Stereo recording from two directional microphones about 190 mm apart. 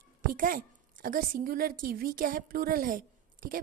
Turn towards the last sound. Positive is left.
turn(degrees=-45)  # may be behind; listen again after turning